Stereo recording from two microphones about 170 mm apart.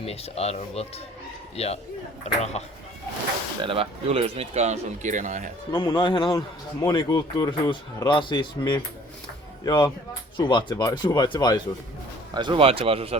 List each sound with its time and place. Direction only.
0.0 s speech: 35° left (ahead or behind)
3.6 s speech: 30° right (ahead or behind)
5.7 s speech: 25° left (ahead or behind)
12.3 s speech: 25° right (ahead or behind)